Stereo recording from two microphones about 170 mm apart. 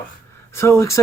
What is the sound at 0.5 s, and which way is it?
Speech, 15° left (ahead or behind).